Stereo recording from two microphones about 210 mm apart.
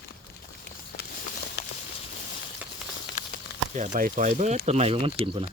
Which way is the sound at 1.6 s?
50° left (ahead or behind).